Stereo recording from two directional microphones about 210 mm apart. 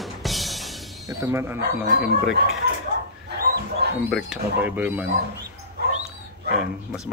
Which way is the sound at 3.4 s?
45° right (ahead or behind).